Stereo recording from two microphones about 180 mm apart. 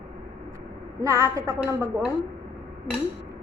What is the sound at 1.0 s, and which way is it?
A woman's voice, 15° right (ahead or behind).